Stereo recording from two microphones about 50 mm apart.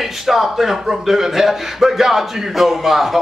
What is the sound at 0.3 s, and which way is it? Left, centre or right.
A man's voice, centre.